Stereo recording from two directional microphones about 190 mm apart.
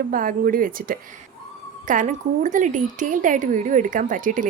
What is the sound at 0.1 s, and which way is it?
Speech, 45° right (ahead or behind).